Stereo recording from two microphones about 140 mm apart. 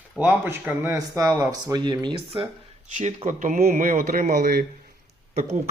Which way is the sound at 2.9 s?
55° right (ahead or behind).